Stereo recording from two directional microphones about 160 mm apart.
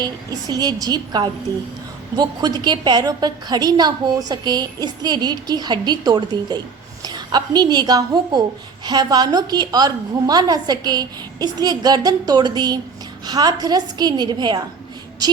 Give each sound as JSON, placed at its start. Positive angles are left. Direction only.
{"t": 0.0, "sound": "a woman's voice", "side_deg": -25}